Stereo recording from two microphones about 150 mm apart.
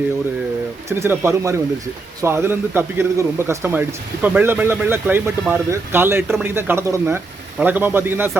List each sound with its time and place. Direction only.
0.9 s speech: 15° right (ahead or behind)